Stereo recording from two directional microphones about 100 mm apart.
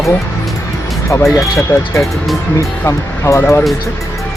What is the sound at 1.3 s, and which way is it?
Speech, 30° left (ahead or behind).